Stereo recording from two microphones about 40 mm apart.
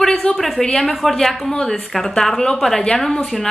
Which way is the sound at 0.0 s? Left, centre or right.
Left.